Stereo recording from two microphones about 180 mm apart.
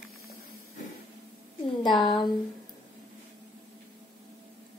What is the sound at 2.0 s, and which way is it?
Speech, 25° left (ahead or behind).